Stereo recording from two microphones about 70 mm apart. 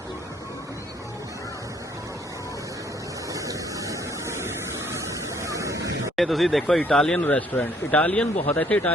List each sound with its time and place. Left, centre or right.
3.3 s a sound: right
4.9 s waves: right
6.1 s speech: centre
7.3 s speech: left